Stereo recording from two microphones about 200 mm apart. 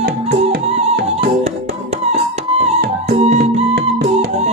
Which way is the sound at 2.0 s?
30° right (ahead or behind).